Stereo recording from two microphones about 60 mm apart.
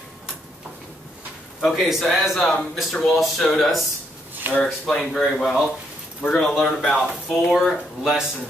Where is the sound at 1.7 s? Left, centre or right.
Centre.